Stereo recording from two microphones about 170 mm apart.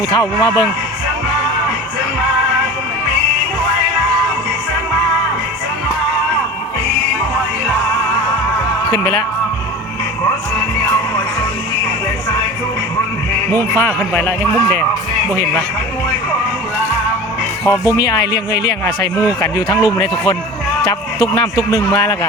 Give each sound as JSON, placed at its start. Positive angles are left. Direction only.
{"t": 0.1, "sound": "speech", "side_deg": 25}
{"t": 8.9, "sound": "speech", "side_deg": 20}
{"t": 13.5, "sound": "speech", "side_deg": 15}
{"t": 17.7, "sound": "speech", "side_deg": 20}
{"t": 18.3, "sound": "speech", "side_deg": 80}
{"t": 19.4, "sound": "speech", "side_deg": 20}